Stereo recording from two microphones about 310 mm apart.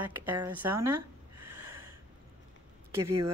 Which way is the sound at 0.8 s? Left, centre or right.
Right.